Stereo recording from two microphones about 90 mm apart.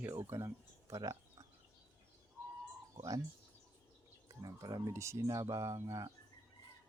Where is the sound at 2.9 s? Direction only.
40° right (ahead or behind).